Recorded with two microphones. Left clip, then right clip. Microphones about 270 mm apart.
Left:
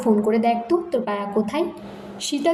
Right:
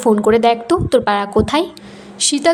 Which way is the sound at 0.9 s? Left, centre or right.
Right.